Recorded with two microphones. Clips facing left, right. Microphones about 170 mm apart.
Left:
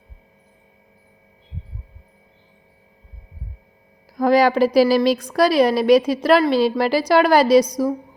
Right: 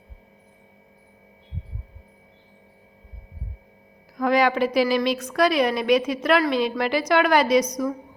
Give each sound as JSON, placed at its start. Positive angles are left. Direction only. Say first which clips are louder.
{"t": 4.2, "sound": "a woman's voice", "louder": "left 5 dB", "side_deg": 35}